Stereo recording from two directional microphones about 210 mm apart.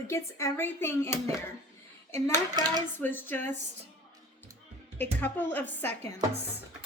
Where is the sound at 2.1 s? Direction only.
10° left (ahead or behind).